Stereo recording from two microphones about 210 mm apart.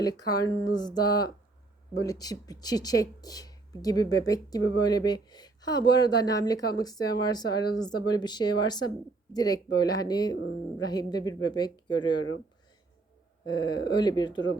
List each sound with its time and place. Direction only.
0.0 s speech: 20° left (ahead or behind)
13.5 s speech: 20° left (ahead or behind)